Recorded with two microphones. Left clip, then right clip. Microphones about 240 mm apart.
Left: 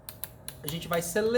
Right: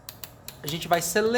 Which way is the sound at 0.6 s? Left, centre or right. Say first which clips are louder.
Right 6 dB; right.